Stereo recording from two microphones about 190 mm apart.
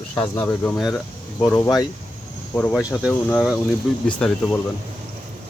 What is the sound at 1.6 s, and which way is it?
Speech, 20° left (ahead or behind).